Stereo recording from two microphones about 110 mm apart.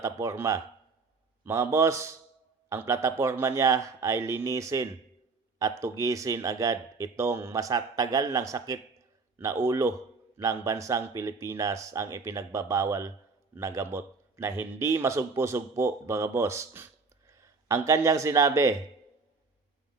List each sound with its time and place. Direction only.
0.0 s speech: 25° right (ahead or behind)